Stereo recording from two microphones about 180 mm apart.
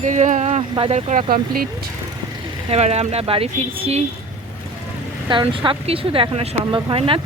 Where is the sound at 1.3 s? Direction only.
55° right (ahead or behind).